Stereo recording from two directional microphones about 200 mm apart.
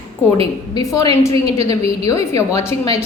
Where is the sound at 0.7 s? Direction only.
15° left (ahead or behind).